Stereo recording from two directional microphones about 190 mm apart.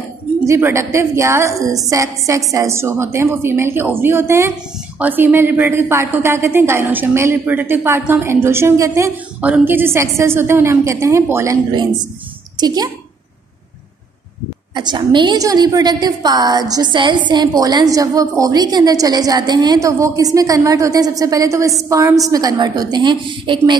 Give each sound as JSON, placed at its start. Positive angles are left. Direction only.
{"t": 0.5, "sound": "a woman's voice", "side_deg": -15}
{"t": 14.7, "sound": "a woman's voice", "side_deg": -25}